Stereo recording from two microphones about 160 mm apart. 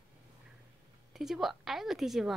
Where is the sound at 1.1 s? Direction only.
Centre (ahead or behind).